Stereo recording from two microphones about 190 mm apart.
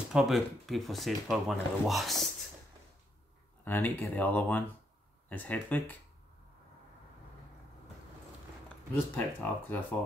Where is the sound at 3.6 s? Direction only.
10° left (ahead or behind).